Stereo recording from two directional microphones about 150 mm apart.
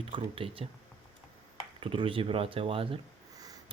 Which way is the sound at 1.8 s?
35° right (ahead or behind).